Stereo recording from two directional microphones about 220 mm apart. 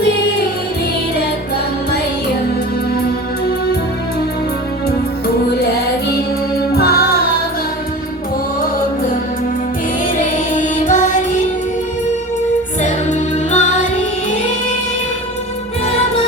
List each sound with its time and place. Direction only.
6.7 s music: 45° left (ahead or behind)
10.5 s music: 35° left (ahead or behind)
12.8 s music: 35° left (ahead or behind)